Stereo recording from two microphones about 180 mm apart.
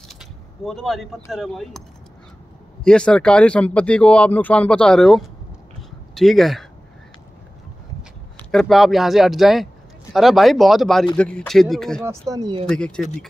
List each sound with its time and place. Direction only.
0.1 s a sound: centre (ahead or behind)
1.3 s speech: centre (ahead or behind)
2.8 s speech: 5° left (ahead or behind)
5.8 s a sound: centre (ahead or behind)
8.4 s speech: 5° left (ahead or behind)
12.0 s speech: 15° right (ahead or behind)
12.6 s speech: 5° left (ahead or behind)